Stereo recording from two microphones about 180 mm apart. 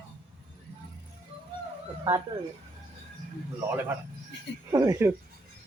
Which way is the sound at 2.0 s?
20° right (ahead or behind).